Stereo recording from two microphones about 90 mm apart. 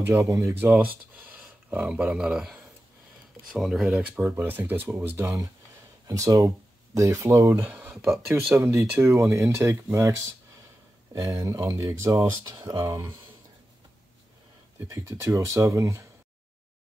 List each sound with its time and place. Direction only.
0.0 s speech: 35° right (ahead or behind)
0.7 s speech: 10° right (ahead or behind)
4.0 s speech: 20° right (ahead or behind)
5.2 s speech: 40° right (ahead or behind)
7.6 s speech: 20° right (ahead or behind)
14.9 s speech: 35° right (ahead or behind)